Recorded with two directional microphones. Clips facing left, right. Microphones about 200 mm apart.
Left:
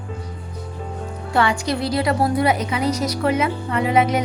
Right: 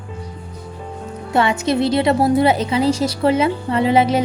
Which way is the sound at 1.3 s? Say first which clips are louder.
Right 3 dB; 20° right (ahead or behind).